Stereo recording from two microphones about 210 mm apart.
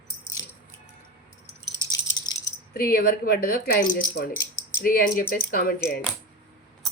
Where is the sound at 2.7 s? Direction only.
45° left (ahead or behind).